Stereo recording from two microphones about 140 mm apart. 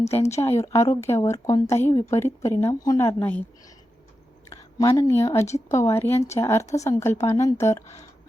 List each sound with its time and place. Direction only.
0.3 s a woman's voice: 20° left (ahead or behind)
4.4 s speech: 25° left (ahead or behind)
5.5 s speech: 55° left (ahead or behind)
5.7 s a woman's voice: 20° left (ahead or behind)